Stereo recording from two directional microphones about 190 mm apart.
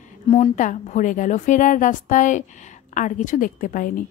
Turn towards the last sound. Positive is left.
turn(degrees=45)  # may be behind; listen again after turning